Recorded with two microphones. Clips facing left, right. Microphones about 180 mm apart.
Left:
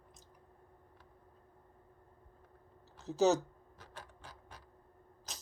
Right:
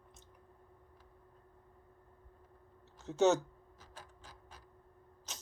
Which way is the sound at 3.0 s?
Centre (ahead or behind).